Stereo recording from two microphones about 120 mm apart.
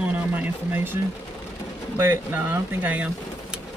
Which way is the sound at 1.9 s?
20° right (ahead or behind).